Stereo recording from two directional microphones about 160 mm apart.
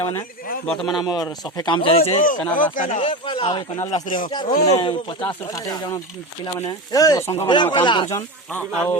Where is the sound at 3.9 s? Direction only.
55° left (ahead or behind).